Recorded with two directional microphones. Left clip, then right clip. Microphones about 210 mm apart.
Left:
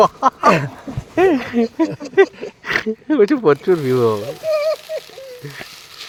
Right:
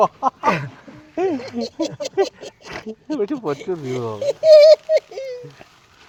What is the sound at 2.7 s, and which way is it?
Speech, 15° left (ahead or behind).